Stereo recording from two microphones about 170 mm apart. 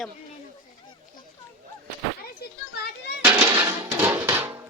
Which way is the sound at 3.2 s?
10° right (ahead or behind).